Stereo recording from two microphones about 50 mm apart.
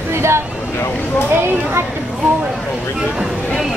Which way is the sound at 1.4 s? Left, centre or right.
Right.